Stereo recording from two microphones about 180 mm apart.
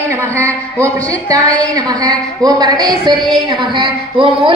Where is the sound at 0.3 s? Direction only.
15° right (ahead or behind).